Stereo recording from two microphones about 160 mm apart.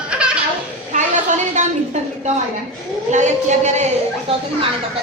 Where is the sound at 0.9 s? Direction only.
50° right (ahead or behind).